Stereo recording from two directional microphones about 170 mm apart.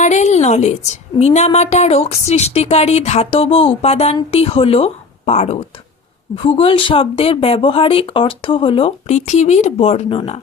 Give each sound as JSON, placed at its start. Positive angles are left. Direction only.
{"t": 0.0, "sound": "a woman's voice", "side_deg": 45}